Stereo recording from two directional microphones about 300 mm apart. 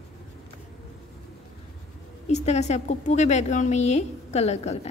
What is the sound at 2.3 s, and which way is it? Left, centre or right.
A woman's voice, left.